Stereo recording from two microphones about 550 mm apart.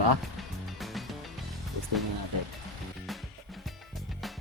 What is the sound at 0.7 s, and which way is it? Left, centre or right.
Music, centre.